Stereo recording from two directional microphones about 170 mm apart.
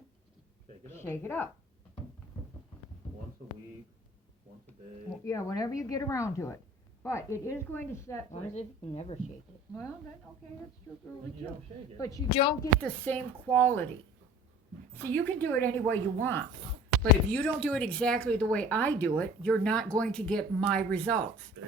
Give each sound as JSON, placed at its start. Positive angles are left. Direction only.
{"t": 0.9, "sound": "speech", "side_deg": 15}
{"t": 5.2, "sound": "speech", "side_deg": 20}
{"t": 8.3, "sound": "speech", "side_deg": 40}
{"t": 11.9, "sound": "speech", "side_deg": 20}
{"t": 12.3, "sound": "speech", "side_deg": 30}
{"t": 12.8, "sound": "speech", "side_deg": 10}
{"t": 14.9, "sound": "speech", "side_deg": 10}